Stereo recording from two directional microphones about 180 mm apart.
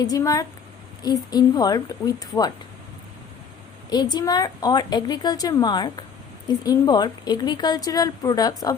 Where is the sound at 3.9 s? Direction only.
20° left (ahead or behind).